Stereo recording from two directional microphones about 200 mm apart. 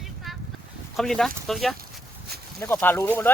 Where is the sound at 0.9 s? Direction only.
Centre (ahead or behind).